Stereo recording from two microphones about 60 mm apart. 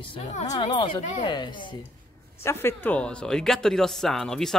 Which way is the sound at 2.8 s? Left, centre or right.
Centre.